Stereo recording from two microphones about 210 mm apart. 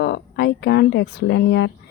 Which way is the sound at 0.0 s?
55° left (ahead or behind).